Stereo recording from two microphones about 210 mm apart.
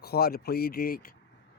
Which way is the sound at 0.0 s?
45° left (ahead or behind).